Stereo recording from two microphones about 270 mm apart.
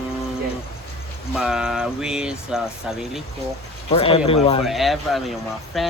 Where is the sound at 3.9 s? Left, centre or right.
Left.